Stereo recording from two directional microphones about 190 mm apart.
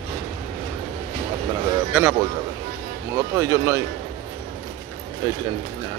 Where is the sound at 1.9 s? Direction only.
10° right (ahead or behind).